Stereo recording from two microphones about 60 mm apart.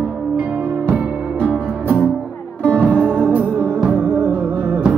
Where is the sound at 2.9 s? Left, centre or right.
Right.